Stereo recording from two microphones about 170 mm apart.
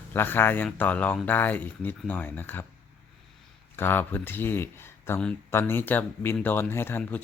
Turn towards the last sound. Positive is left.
turn(degrees=10)  # may be behind; listen again after turning